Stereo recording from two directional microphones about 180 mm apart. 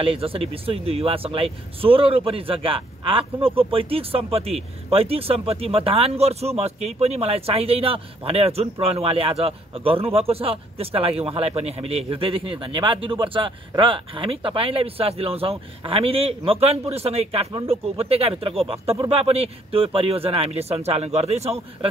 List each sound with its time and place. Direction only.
0.0 s speech: 30° right (ahead or behind)